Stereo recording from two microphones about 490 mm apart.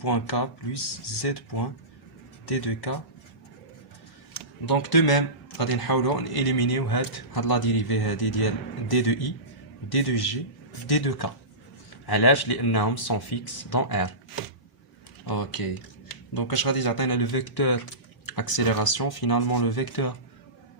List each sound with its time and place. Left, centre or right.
0.0 s speech: left
2.5 s speech: left
4.4 s speech: left
15.3 s speech: left